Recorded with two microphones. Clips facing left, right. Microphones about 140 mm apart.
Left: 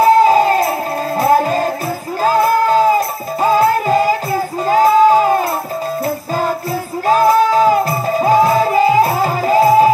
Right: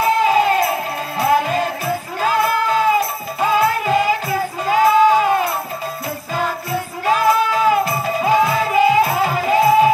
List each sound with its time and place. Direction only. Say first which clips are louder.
0.0 s music: left 5 dB; 40° left (ahead or behind)
7.1 s music: left 5 dB; 40° left (ahead or behind)